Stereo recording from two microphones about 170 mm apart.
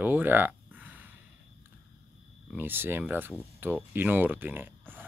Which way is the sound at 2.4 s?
10° right (ahead or behind).